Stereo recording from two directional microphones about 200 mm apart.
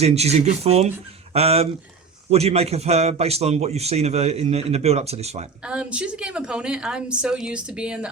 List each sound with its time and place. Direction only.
0.0 s a man's voice: 30° right (ahead or behind)
5.6 s a woman's voice: 5° right (ahead or behind)